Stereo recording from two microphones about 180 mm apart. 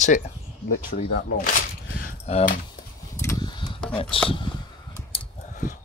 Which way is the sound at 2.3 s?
35° left (ahead or behind).